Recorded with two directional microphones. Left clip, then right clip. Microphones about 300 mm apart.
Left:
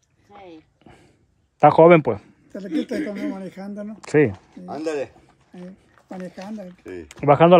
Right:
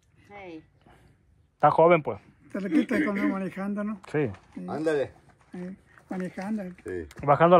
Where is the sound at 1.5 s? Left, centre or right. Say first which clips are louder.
Left 7 dB; left.